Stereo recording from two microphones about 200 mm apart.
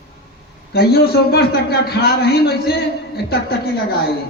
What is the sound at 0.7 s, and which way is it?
A man's voice, 50° left (ahead or behind).